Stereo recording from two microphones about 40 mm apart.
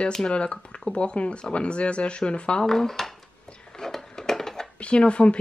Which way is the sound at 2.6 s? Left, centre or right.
Centre.